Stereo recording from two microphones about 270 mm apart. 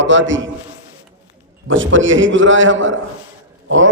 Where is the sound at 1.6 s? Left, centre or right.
Right.